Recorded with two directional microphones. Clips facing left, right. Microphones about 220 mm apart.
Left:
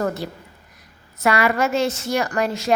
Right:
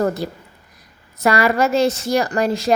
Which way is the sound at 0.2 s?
40° right (ahead or behind).